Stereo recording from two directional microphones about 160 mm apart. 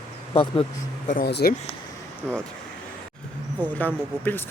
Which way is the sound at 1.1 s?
75° left (ahead or behind).